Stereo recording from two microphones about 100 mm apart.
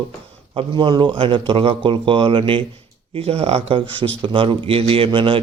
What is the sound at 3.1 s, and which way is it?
Speech, 75° right (ahead or behind).